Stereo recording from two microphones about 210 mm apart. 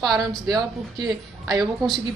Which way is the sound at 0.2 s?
Centre (ahead or behind).